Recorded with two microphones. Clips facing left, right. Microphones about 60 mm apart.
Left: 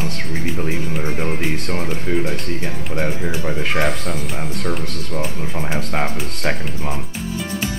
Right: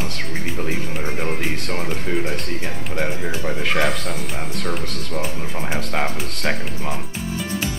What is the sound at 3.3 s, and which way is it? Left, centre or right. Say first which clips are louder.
Speech: left 1 dB; centre.